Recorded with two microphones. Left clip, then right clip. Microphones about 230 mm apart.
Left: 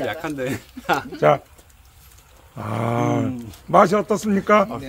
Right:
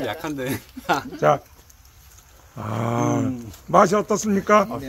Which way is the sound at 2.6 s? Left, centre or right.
Centre.